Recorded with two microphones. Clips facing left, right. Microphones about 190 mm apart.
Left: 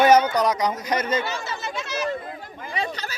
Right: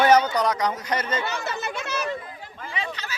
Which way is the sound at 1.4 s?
60° right (ahead or behind).